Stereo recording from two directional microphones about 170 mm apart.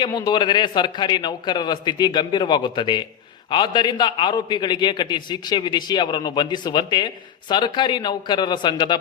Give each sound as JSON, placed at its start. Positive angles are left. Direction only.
{"t": 0.0, "sound": "a man's voice", "side_deg": 25}